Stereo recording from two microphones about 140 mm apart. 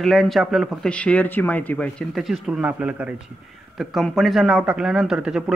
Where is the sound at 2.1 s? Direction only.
Centre (ahead or behind).